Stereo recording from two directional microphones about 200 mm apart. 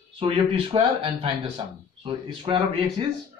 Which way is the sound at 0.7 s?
30° right (ahead or behind).